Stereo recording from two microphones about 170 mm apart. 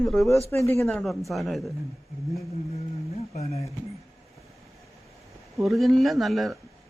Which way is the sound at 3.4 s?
40° left (ahead or behind).